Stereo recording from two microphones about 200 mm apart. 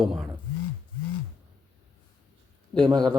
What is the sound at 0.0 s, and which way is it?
Speech, centre (ahead or behind).